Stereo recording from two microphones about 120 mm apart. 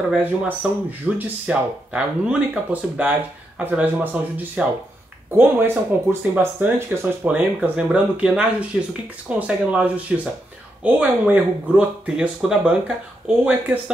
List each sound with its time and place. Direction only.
0.1 s speech: 10° right (ahead or behind)